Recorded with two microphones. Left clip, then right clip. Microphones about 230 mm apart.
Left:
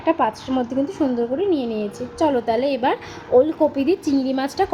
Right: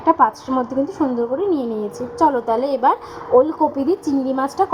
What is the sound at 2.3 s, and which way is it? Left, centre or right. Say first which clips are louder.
A woman's voice: left 1 dB; centre.